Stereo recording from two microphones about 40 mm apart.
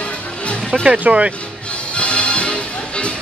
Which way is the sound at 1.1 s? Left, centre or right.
Right.